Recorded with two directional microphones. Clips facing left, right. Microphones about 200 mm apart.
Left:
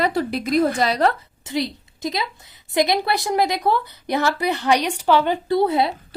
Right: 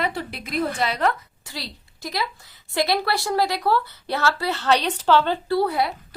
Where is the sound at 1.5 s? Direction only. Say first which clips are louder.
Left 12 dB; 20° left (ahead or behind).